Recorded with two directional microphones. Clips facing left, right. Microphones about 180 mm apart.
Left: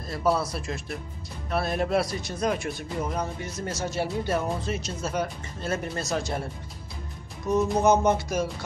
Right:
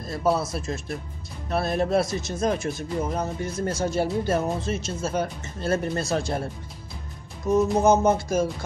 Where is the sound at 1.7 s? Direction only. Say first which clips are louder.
Right 3 dB; 40° right (ahead or behind).